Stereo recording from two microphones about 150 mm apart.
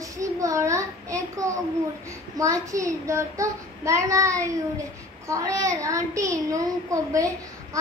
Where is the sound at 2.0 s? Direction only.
20° right (ahead or behind).